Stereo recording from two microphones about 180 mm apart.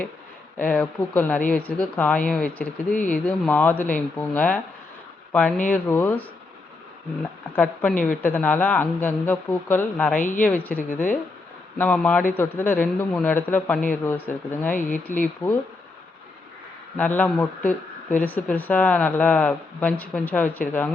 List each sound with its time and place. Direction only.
0.7 s speech: 5° left (ahead or behind)
7.5 s speech: 10° left (ahead or behind)
10.2 s a woman's voice: 45° left (ahead or behind)
10.4 s speech: 10° left (ahead or behind)
14.8 s a woman's voice: 45° left (ahead or behind)
17.0 s speech: 10° left (ahead or behind)